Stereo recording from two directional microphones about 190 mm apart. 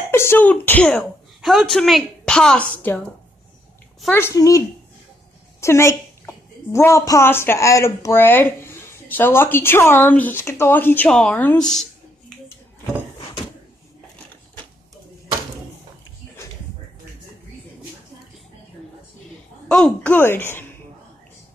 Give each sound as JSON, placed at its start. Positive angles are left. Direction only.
{"t": 0.1, "sound": "a woman's voice", "side_deg": 10}
{"t": 4.1, "sound": "a woman's voice", "side_deg": 15}
{"t": 19.7, "sound": "a woman's voice", "side_deg": 5}